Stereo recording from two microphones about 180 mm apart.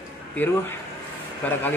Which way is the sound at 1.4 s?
10° left (ahead or behind).